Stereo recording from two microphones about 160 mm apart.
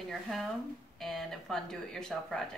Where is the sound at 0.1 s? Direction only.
Centre (ahead or behind).